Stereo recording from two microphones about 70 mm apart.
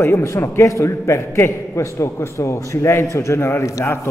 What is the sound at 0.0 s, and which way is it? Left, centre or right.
A man's voice, left.